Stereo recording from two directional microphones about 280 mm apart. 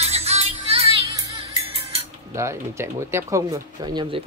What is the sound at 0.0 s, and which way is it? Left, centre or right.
Music, right.